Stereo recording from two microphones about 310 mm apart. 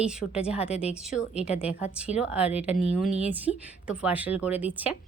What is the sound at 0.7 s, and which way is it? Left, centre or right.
Speech, centre.